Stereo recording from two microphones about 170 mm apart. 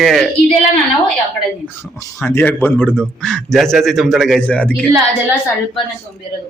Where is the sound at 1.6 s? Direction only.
15° left (ahead or behind).